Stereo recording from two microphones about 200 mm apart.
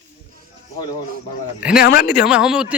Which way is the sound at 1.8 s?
50° left (ahead or behind).